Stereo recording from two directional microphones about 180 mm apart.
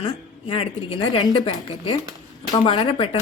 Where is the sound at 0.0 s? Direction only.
30° left (ahead or behind).